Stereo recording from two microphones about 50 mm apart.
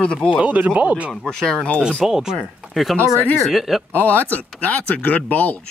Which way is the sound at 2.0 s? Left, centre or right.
Centre.